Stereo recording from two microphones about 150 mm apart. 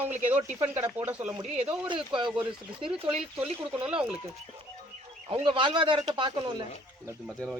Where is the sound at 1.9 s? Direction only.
35° right (ahead or behind).